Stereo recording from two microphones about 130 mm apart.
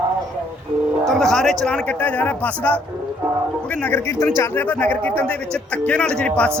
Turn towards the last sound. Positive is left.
turn(degrees=10)  # may be behind; listen again after turning